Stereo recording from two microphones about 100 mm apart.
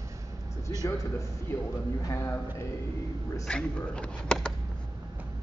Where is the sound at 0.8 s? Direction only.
35° left (ahead or behind).